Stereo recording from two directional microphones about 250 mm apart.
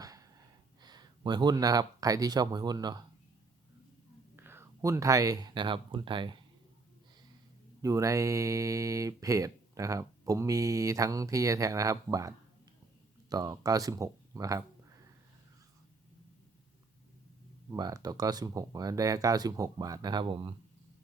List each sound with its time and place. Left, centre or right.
0.0 s gasp: centre
0.8 s speech: centre
4.4 s speech: centre
7.8 s speech: centre
13.3 s speech: centre
17.7 s speech: centre